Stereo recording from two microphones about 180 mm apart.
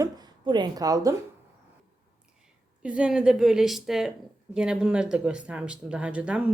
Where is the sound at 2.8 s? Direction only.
5° right (ahead or behind).